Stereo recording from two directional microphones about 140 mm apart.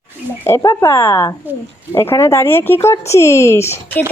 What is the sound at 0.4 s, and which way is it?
Speech, 20° left (ahead or behind).